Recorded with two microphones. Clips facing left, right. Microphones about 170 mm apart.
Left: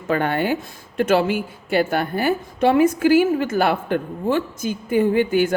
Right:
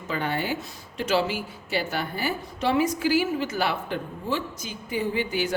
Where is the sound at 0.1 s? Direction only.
55° left (ahead or behind).